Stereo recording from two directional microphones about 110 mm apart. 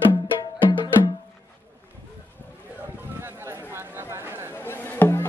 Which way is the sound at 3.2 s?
20° right (ahead or behind).